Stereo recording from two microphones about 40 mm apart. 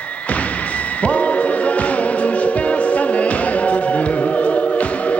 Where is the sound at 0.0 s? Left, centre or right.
Left.